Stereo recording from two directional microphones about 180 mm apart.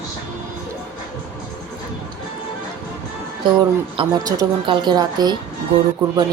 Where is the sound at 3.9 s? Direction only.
25° right (ahead or behind).